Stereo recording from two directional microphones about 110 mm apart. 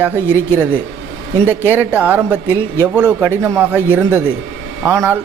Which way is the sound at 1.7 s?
15° right (ahead or behind).